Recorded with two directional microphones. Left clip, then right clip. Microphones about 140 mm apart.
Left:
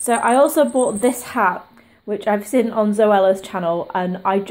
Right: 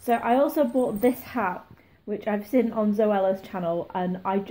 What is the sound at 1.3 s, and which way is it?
Speech, 25° left (ahead or behind).